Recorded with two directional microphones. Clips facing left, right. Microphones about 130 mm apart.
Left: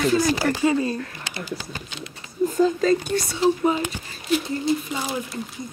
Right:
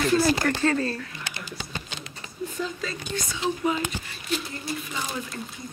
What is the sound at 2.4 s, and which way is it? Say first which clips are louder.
Whispering: left 12 dB; 45° left (ahead or behind).